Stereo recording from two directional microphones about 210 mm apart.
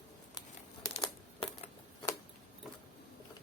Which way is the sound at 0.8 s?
15° left (ahead or behind).